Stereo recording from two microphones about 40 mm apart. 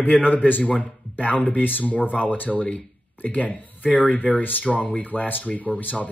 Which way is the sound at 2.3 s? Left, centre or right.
Left.